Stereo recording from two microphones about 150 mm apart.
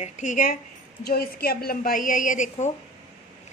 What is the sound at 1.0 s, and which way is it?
A woman's voice, 90° left.